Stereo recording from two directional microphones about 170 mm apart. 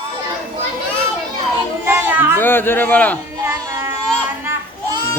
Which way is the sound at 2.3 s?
10° left (ahead or behind).